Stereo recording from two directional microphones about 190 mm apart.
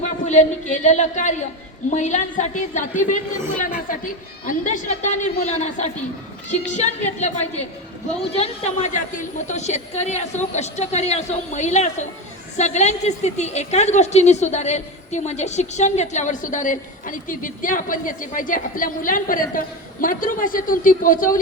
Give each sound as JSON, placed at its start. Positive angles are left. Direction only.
{"t": 0.0, "sound": "a woman's voice", "side_deg": 40}
{"t": 4.4, "sound": "a woman's voice", "side_deg": 40}